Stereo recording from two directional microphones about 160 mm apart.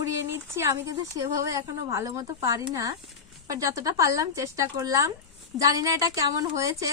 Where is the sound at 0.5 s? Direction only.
15° right (ahead or behind).